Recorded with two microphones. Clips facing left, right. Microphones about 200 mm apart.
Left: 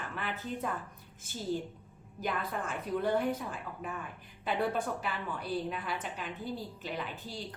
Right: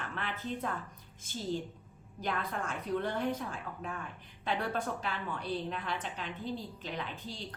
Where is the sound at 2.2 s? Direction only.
5° left (ahead or behind).